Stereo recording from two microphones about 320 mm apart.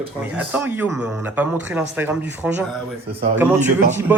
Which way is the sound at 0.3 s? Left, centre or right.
Centre.